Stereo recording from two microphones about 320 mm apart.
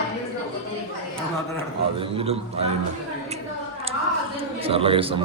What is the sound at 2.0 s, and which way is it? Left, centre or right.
Speech, centre.